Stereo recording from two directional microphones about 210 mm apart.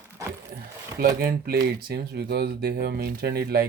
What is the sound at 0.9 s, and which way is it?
Speech, 45° right (ahead or behind).